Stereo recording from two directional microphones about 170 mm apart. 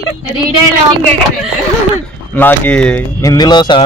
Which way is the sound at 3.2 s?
25° left (ahead or behind).